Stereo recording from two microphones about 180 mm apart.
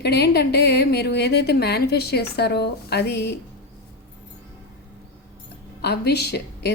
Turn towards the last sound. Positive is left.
turn(degrees=65)  # may be behind; listen again after turning